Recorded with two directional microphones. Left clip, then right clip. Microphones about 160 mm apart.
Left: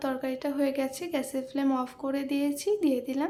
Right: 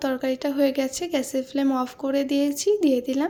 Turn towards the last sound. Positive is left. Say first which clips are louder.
# right 6 dB
turn(degrees=-30)  # may be behind; listen again after turning